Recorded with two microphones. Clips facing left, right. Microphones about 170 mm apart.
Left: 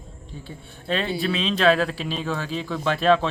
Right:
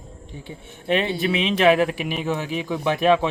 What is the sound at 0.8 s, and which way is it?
Speech, 20° right (ahead or behind).